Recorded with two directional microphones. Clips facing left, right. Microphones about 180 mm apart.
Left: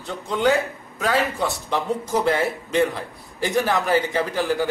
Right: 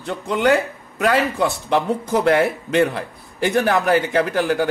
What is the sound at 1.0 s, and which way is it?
A man's voice, 70° right (ahead or behind).